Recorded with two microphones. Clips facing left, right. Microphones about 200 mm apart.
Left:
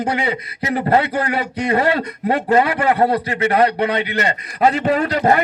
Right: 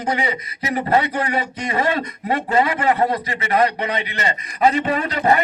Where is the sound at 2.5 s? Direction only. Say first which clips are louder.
Left 2 dB; 55° left (ahead or behind); by 5.4 s 40° left (ahead or behind).